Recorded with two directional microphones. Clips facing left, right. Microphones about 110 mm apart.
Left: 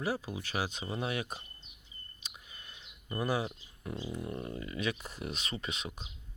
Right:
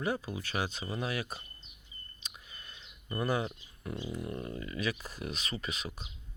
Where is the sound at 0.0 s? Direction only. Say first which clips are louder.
Right 1 dB; 5° left (ahead or behind).